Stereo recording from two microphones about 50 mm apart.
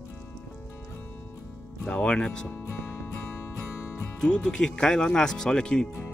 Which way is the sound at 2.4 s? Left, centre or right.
Left.